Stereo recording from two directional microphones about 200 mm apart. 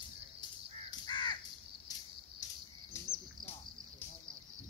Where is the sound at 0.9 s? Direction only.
25° left (ahead or behind).